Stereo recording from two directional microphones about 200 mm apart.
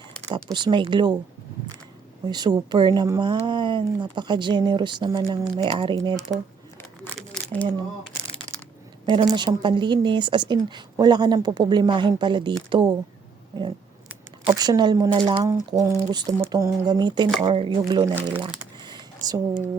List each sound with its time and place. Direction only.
0.5 s speech: 25° right (ahead or behind)
2.2 s speech: 20° right (ahead or behind)
7.2 s a sound: 5° left (ahead or behind)
9.0 s speech: 20° right (ahead or behind)
14.4 s speech: 20° right (ahead or behind)
18.1 s speech: 10° right (ahead or behind)
18.8 s a sound: 20° right (ahead or behind)